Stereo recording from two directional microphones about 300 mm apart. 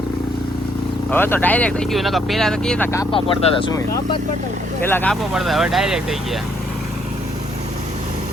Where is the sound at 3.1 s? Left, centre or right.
Centre.